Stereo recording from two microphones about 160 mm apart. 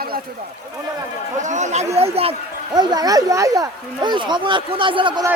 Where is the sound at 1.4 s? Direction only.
50° right (ahead or behind).